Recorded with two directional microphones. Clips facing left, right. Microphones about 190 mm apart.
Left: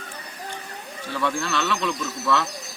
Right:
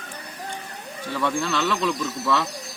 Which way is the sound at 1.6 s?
10° right (ahead or behind).